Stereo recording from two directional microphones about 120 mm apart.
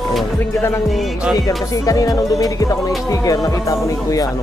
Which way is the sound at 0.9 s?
Centre (ahead or behind).